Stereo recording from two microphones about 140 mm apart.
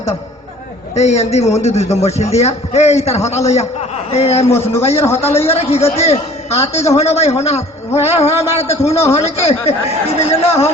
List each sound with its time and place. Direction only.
0.9 s a man's voice: 50° left (ahead or behind)
4.4 s a man's voice: 20° left (ahead or behind)
5.5 s a man's voice: 50° left (ahead or behind)